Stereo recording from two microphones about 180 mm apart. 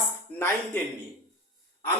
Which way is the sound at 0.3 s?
5° left (ahead or behind).